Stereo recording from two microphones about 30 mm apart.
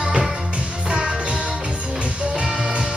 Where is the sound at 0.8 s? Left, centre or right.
Right.